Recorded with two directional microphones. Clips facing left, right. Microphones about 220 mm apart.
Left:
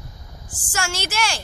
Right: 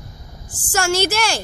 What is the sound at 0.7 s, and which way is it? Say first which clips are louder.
Speech: right 9 dB; 40° right (ahead or behind).